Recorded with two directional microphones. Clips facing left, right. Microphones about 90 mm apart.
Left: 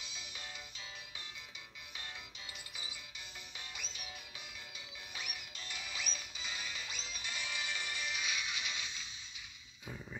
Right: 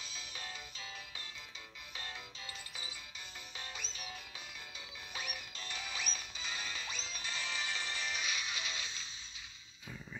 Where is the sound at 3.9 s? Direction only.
30° right (ahead or behind).